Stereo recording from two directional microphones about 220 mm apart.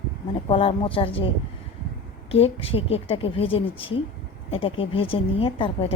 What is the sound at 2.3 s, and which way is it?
A woman's voice, 25° left (ahead or behind).